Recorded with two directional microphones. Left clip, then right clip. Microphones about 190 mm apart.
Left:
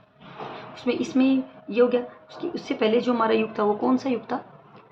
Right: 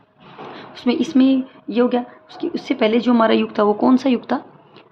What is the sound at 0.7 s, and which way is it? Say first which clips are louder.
A woman's voice: right 7 dB; 45° right (ahead or behind).